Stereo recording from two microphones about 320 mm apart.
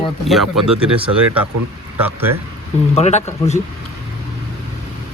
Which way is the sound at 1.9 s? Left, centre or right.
Centre.